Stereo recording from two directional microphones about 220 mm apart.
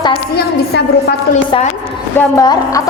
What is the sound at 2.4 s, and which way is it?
Speech, 15° left (ahead or behind).